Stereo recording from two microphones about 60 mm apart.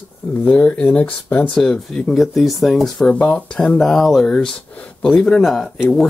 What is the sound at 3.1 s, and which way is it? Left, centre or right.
Speech, centre.